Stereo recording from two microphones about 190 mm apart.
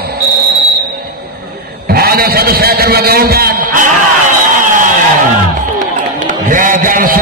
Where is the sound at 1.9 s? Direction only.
55° right (ahead or behind).